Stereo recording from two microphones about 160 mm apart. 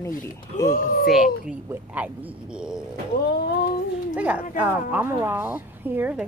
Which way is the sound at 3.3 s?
85° left.